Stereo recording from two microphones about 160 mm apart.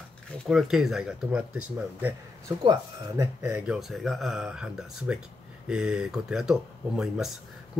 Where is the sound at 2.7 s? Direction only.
20° right (ahead or behind).